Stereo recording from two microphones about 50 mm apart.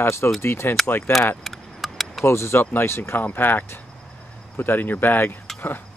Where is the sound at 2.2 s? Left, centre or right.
Left.